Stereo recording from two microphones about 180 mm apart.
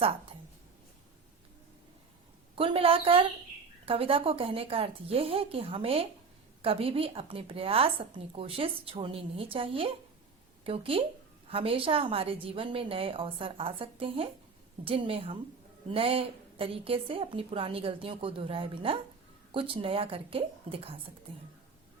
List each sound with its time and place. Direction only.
0.0 s a woman's voice: 30° right (ahead or behind)
2.6 s a woman's voice: 30° right (ahead or behind)